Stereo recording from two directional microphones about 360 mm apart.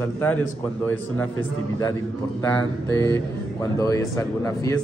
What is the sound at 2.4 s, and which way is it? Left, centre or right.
Speech, centre.